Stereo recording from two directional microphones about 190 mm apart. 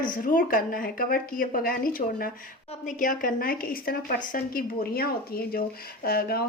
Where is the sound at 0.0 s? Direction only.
45° left (ahead or behind).